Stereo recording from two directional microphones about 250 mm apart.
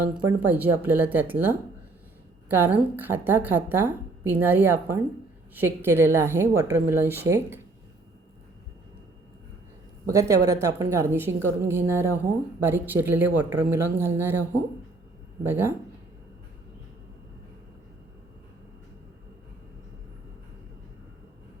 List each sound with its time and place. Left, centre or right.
0.3 s a woman's voice: centre
10.1 s a woman's voice: centre
15.4 s a woman's voice: centre